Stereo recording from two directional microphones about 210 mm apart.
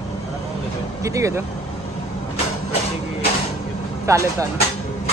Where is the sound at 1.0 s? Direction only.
15° right (ahead or behind).